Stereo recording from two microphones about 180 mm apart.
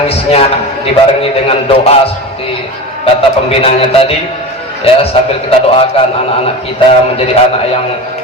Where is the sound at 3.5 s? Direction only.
30° left (ahead or behind).